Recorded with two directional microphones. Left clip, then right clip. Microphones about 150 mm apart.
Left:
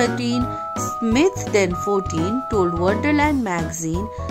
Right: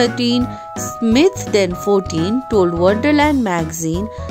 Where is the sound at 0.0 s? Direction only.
30° right (ahead or behind).